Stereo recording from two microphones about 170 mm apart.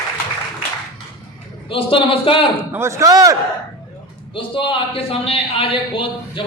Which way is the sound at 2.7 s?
15° right (ahead or behind).